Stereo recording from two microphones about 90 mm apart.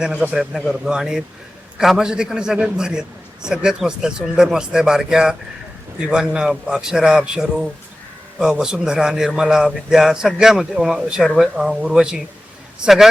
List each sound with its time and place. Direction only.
0.0 s a man's voice: 5° right (ahead or behind)